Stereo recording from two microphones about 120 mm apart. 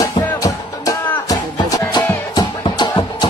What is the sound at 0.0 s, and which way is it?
Music, 30° left (ahead or behind).